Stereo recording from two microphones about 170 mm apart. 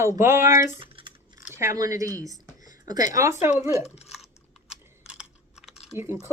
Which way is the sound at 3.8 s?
40° left (ahead or behind).